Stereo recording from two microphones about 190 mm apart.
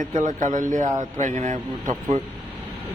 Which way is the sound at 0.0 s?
40° right (ahead or behind).